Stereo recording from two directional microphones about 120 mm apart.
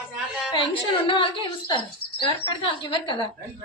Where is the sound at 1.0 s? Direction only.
45° left (ahead or behind).